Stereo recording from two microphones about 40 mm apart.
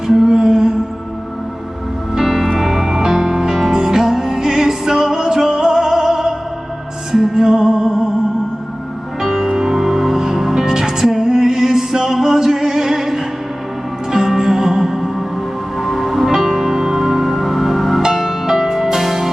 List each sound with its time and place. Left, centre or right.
0.1 s music: centre
2.1 s music: centre
9.2 s music: centre